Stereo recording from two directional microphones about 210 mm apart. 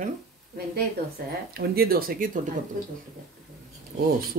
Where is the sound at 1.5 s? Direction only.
45° right (ahead or behind).